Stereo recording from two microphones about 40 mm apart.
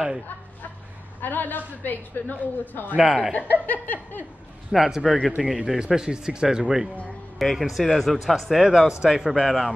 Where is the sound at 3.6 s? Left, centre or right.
Left.